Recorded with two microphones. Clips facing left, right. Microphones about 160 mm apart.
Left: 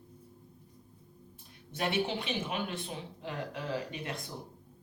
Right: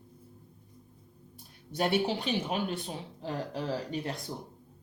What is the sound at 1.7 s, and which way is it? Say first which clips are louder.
Speech: right 4 dB; 35° right (ahead or behind).